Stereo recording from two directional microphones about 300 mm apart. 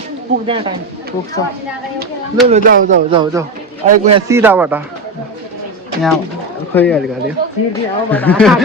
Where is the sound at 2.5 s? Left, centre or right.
Right.